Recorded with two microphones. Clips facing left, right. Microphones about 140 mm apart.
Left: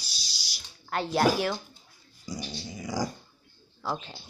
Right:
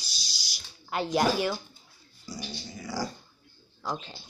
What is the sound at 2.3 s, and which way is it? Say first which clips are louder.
Dog: left 2 dB; 15° left (ahead or behind).